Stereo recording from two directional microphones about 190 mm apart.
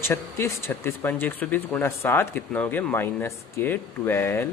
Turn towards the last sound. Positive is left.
turn(degrees=10)  # may be behind; listen again after turning